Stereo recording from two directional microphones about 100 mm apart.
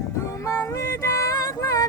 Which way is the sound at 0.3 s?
30° left (ahead or behind).